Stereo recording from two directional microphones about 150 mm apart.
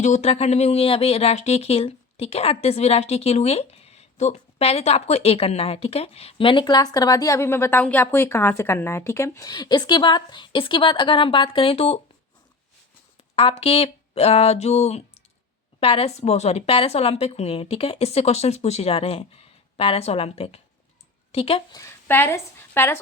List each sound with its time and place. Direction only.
0.0 s speech: 50° left (ahead or behind)
13.3 s a woman's voice: 40° left (ahead or behind)
21.7 s a woman's voice: 25° left (ahead or behind)